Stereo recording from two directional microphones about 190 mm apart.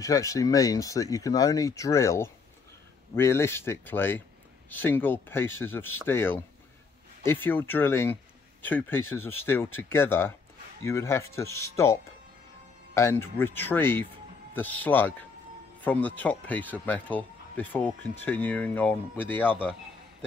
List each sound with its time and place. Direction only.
0.0 s speech: 15° left (ahead or behind)